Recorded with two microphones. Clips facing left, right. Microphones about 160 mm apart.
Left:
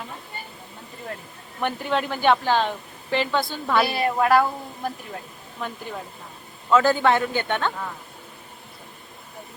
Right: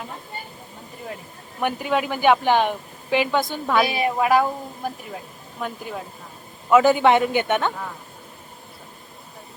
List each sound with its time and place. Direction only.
1.6 s a woman's voice: 10° right (ahead or behind)